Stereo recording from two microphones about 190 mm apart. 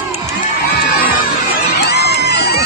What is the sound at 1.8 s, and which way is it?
Music, 60° left (ahead or behind).